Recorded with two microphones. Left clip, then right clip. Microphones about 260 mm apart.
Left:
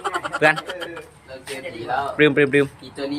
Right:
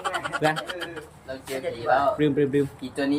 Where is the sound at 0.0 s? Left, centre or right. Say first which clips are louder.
Left 6 dB; centre.